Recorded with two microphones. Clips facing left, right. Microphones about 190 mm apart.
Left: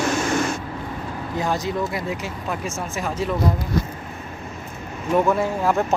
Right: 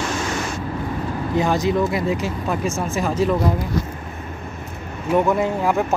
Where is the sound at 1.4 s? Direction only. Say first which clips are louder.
Right 5 dB; 90° right.